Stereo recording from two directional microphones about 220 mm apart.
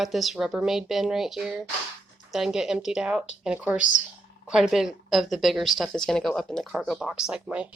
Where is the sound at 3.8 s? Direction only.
35° left (ahead or behind).